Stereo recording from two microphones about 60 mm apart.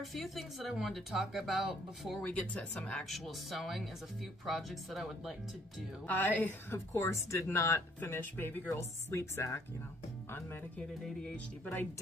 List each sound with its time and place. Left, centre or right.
0.0 s speech: centre
2.2 s speech: centre
3.1 s speech: centre
6.0 s speech: left
6.9 s speech: left
8.2 s speech: left
8.6 s a woman's voice: left